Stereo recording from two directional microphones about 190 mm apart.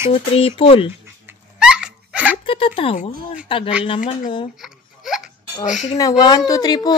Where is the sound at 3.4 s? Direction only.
30° left (ahead or behind).